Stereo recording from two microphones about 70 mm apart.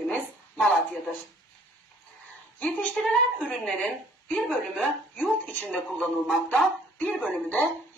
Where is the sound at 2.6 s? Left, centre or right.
Centre.